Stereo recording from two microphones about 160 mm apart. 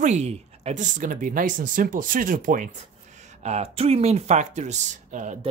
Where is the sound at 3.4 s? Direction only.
40° right (ahead or behind).